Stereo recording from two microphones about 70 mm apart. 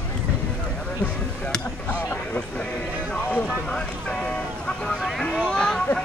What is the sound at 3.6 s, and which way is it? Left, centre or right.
Boat, centre.